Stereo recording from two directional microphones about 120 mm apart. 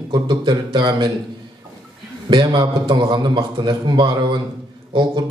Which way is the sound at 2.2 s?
40° right (ahead or behind).